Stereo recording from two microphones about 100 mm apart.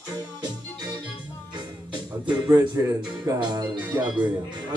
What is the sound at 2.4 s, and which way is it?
Speech, 30° right (ahead or behind).